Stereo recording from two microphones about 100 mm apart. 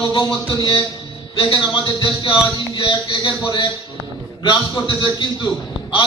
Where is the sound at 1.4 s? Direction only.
55° left (ahead or behind).